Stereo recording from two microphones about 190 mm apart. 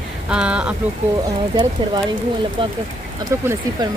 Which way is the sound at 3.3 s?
15° right (ahead or behind).